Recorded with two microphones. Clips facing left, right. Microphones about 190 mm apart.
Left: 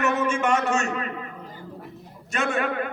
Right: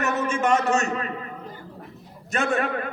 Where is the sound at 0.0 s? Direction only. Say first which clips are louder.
Left 1 dB; 40° right (ahead or behind).